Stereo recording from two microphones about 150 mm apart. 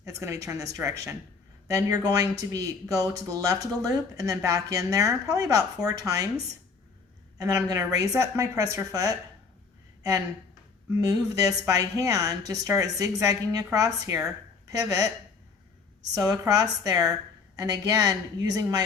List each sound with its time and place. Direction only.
0.0 s a sound: 20° right (ahead or behind)
0.4 s speech: 20° right (ahead or behind)
11.0 s speech: 25° right (ahead or behind)
16.1 s speech: 25° right (ahead or behind)